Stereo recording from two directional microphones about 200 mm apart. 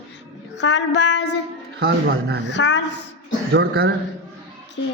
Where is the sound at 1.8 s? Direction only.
55° right (ahead or behind).